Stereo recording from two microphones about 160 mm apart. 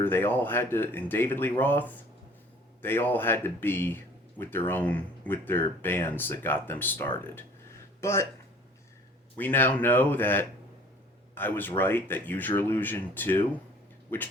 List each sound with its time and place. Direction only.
0.0 s speech: 15° left (ahead or behind)
9.4 s speech: 10° left (ahead or behind)